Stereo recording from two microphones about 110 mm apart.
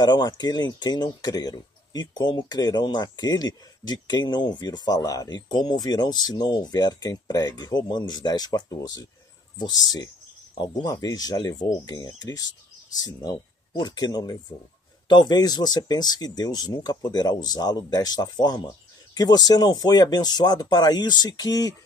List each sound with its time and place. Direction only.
0.0 s speech: 40° left (ahead or behind)